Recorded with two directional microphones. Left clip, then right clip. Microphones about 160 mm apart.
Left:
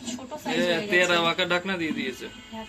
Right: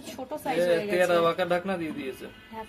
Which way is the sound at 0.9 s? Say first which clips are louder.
Left 5 dB; 15° right (ahead or behind).